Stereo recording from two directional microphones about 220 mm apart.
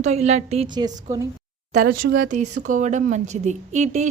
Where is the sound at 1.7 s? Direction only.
40° right (ahead or behind).